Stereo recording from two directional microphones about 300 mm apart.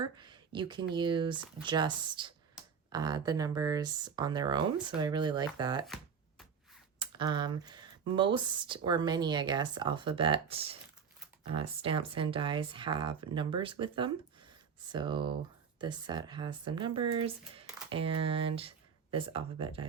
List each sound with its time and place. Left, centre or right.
0.0 s a sound: centre
0.9 s speech: centre
5.8 s shuffling cards: centre
7.0 s speech: centre